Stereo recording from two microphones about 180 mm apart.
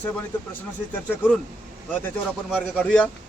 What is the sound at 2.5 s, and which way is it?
Speech, centre (ahead or behind).